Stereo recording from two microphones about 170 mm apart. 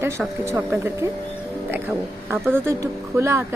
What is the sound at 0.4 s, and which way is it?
Speech, 15° right (ahead or behind).